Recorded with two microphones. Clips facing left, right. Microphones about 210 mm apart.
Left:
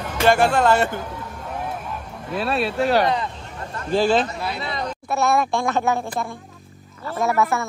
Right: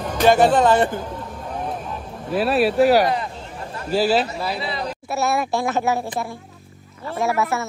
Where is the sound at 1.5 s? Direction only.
10° left (ahead or behind).